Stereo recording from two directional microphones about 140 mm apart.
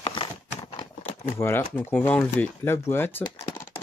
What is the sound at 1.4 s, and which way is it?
Speech, 15° left (ahead or behind).